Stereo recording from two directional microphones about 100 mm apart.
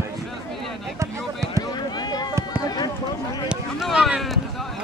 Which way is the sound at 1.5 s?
45° left (ahead or behind).